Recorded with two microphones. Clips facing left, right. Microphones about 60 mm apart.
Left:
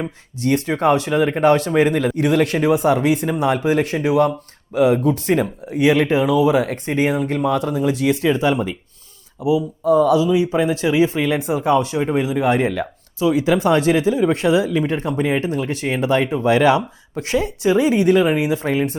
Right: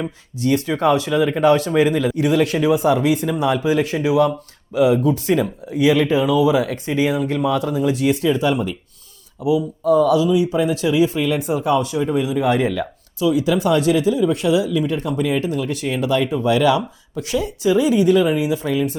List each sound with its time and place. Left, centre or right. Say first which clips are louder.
0.3 s speech: even; left
8.4 s speech: left 1 dB; left
12.8 s speech: even; left